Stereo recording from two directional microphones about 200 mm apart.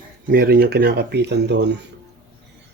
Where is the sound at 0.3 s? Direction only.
50° right (ahead or behind).